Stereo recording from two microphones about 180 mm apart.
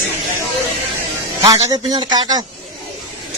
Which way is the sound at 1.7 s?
20° right (ahead or behind).